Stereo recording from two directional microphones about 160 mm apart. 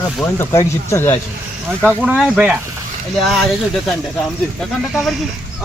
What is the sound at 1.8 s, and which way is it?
Speech, 5° right (ahead or behind).